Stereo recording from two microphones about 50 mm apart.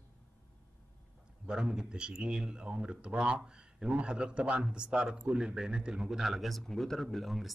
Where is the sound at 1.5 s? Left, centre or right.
Centre.